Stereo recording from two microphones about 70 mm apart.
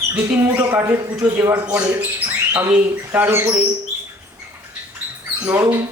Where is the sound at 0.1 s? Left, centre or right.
Right.